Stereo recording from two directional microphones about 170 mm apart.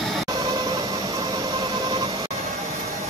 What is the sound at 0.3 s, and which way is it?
Train, 25° right (ahead or behind).